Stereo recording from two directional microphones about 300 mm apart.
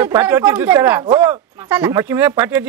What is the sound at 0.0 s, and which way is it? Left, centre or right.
Speech, centre.